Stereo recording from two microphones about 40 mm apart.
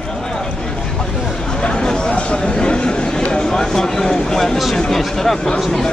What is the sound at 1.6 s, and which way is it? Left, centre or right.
Chatter, centre.